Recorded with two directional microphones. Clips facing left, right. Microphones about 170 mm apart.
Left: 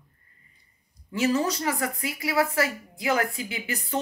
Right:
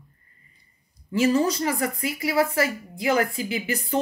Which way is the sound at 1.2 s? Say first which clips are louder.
Right 4 dB; centre (ahead or behind).